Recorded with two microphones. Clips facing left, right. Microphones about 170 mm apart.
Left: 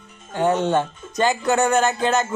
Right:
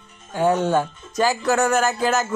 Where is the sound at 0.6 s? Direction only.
5° right (ahead or behind).